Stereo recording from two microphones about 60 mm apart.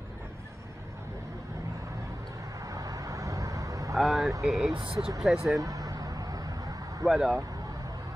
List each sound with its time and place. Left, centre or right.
2.6 s vehicle: right
3.9 s vehicle: centre
4.4 s speech: centre
5.6 s vehicle: right
7.1 s speech: centre